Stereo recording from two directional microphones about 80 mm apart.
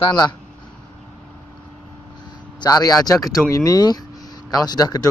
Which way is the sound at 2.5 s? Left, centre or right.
Left.